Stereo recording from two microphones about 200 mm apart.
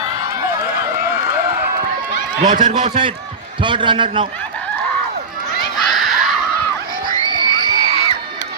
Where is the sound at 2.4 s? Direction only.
40° right (ahead or behind).